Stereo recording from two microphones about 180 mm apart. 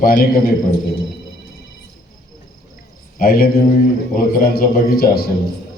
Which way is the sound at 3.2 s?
55° left (ahead or behind).